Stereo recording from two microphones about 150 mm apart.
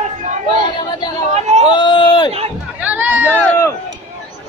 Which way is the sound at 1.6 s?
30° left (ahead or behind).